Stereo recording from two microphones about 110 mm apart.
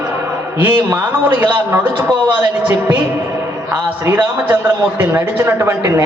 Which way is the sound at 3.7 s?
25° right (ahead or behind).